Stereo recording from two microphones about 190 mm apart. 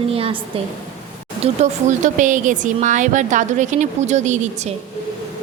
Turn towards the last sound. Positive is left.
turn(degrees=-40)  # may be behind; listen again after turning